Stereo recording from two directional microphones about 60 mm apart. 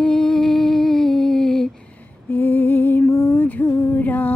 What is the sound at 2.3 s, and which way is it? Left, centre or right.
Lullaby, left.